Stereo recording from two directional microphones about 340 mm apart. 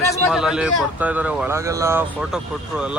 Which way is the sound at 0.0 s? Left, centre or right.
Centre.